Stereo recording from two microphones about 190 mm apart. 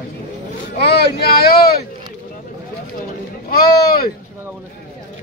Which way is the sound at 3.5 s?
50° left (ahead or behind).